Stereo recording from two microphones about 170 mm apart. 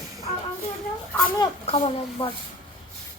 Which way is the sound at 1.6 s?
35° left (ahead or behind).